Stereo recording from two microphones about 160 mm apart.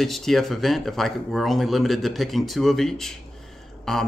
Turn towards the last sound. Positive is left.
turn(degrees=0)  # may be behind; listen again after turning